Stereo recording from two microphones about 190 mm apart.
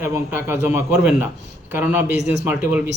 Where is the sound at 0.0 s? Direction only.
15° right (ahead or behind).